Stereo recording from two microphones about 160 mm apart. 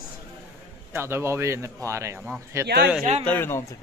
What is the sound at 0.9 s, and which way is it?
A man's voice, 15° right (ahead or behind).